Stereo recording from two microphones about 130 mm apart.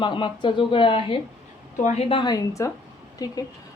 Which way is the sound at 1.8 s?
55° left (ahead or behind).